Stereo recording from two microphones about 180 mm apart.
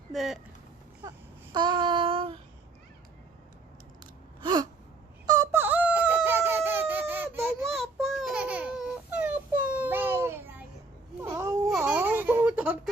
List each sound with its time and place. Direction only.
0.1 s speech: centre (ahead or behind)
1.5 s child singing: 25° right (ahead or behind)
4.0 s gasp: 25° right (ahead or behind)
5.2 s a sound: 20° right (ahead or behind)
7.7 s babbling: centre (ahead or behind); by 11.6 s 15° right (ahead or behind)
11.8 s baby laughter: 10° right (ahead or behind)